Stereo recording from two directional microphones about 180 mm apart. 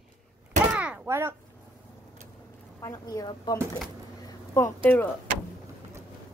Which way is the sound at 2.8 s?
20° left (ahead or behind).